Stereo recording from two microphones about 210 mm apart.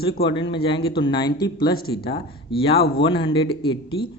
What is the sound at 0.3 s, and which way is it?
Speech, 20° left (ahead or behind).